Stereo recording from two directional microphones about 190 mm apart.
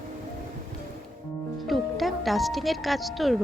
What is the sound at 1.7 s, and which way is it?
Speech, centre (ahead or behind).